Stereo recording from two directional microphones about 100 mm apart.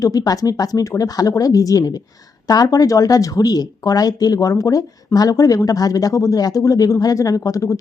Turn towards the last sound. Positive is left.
turn(degrees=35)  # may be behind; listen again after turning